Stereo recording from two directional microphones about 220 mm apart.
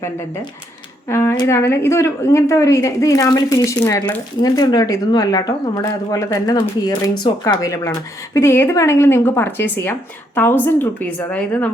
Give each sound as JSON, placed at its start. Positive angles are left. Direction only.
{"t": 1.0, "sound": "a woman's voice", "side_deg": 10}